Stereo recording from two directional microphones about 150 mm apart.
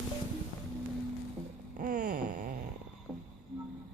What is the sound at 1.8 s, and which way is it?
Wail, 65° right (ahead or behind).